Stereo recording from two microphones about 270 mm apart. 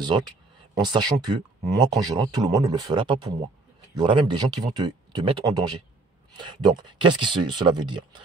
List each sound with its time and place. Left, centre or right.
0.8 s speech: centre